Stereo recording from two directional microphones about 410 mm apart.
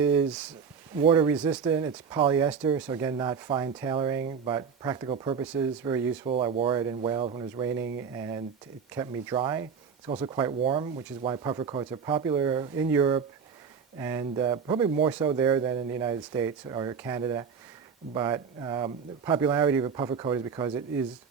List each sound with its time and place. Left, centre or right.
0.0 s speech: centre
7.7 s speech: right
8.1 s speech: centre